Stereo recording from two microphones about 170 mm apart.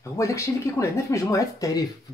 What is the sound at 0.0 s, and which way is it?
Speech, 20° left (ahead or behind).